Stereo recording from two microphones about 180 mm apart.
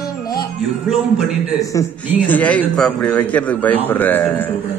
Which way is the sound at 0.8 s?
Centre (ahead or behind).